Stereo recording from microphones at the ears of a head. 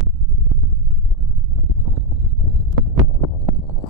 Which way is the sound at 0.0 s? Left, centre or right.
Right.